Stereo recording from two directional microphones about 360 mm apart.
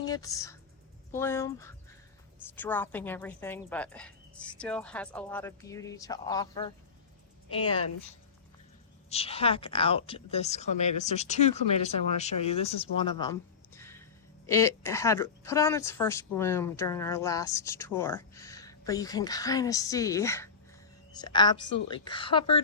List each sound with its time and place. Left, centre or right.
0.0 s speech: centre
9.0 s speech: centre